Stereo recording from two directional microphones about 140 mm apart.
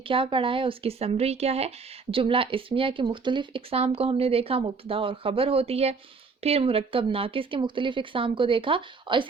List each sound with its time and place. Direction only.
0.0 s speech: 40° right (ahead or behind)